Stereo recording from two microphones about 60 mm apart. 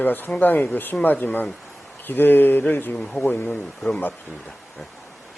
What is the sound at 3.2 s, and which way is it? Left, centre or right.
Speech, left.